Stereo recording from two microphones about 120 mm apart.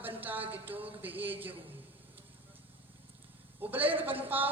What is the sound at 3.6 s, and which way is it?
Speech, 15° right (ahead or behind).